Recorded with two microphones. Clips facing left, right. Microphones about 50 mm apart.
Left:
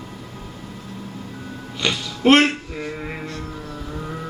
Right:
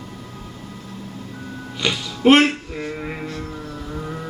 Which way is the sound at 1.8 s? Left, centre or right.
Centre.